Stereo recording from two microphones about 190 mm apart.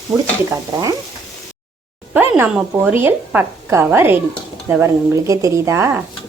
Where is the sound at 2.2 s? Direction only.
10° right (ahead or behind).